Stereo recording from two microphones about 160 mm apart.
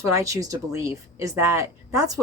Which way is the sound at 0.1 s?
20° right (ahead or behind).